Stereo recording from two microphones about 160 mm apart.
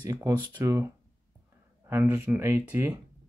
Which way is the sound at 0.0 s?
15° right (ahead or behind).